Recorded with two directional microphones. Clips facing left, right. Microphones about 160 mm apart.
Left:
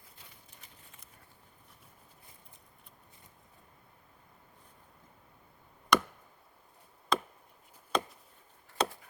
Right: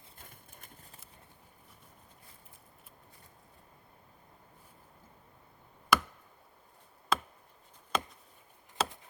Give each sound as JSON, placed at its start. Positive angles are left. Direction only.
{"t": 0.2, "sound": "clip-clop", "side_deg": -50}
{"t": 5.9, "sound": "chop", "side_deg": -5}
{"t": 7.1, "sound": "chop", "side_deg": -5}